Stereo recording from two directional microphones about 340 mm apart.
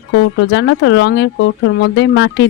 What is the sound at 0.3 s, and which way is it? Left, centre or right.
Speech, left.